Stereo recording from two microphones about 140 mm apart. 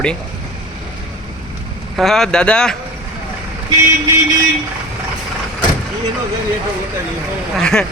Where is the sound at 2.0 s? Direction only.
5° left (ahead or behind).